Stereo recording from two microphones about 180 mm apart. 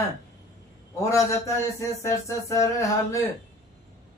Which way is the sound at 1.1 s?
15° left (ahead or behind).